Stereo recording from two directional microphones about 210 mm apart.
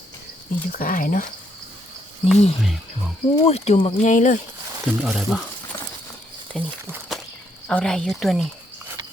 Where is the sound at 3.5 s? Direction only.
30° left (ahead or behind).